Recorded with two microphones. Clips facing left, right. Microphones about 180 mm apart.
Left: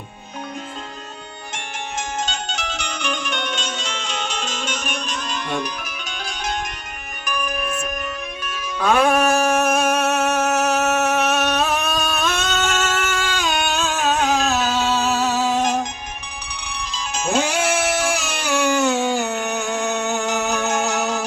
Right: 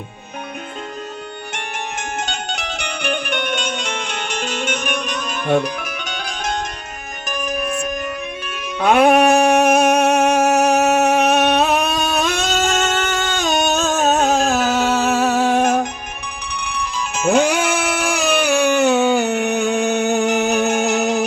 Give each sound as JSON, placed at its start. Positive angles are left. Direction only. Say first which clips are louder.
{"t": 1.5, "sound": "music", "louder": "even", "side_deg": -60}
{"t": 7.3, "sound": "music", "louder": "right 2 dB", "side_deg": -45}
{"t": 8.8, "sound": "music", "louder": "right 4 dB", "side_deg": -20}